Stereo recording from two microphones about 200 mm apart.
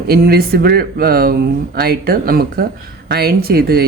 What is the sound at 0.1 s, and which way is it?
Speech, 50° right (ahead or behind).